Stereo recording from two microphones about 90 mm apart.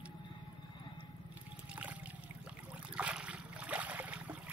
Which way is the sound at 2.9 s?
10° right (ahead or behind).